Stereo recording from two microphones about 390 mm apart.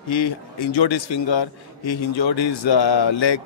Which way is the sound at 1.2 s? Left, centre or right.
Left.